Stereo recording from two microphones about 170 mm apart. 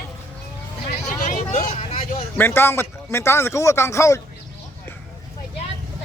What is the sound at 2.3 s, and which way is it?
Speech, 15° left (ahead or behind).